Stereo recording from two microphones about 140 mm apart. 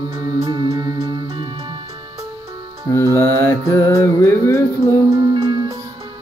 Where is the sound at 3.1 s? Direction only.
15° left (ahead or behind).